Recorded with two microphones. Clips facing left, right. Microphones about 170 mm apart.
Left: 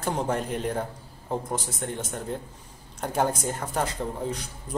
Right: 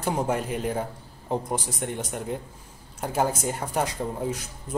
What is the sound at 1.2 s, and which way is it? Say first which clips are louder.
Speech: right 2 dB; 15° right (ahead or behind).